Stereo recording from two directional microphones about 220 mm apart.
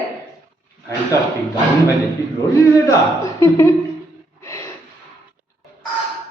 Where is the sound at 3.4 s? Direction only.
15° left (ahead or behind).